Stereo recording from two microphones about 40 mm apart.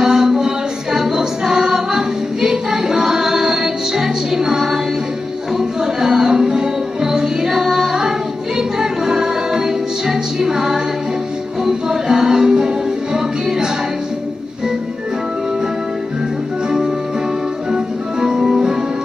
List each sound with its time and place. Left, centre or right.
0.0 s music: centre
0.9 s choir: centre
5.6 s music: centre
17.6 s music: centre